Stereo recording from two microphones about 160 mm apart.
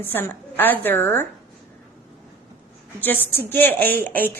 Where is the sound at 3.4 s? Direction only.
10° left (ahead or behind).